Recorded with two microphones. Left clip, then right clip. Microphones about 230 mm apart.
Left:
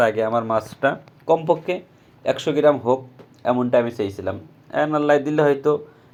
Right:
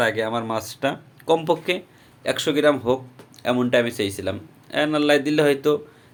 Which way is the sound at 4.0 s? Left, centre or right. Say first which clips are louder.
Even; right.